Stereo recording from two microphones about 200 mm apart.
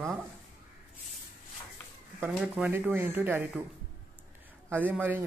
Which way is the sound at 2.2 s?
5° right (ahead or behind).